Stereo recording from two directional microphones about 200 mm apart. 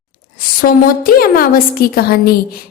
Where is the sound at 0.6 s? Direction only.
45° left (ahead or behind).